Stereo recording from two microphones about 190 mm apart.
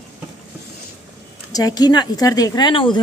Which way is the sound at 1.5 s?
20° left (ahead or behind).